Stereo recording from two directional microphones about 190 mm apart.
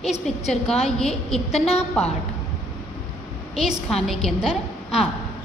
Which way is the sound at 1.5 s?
35° left (ahead or behind).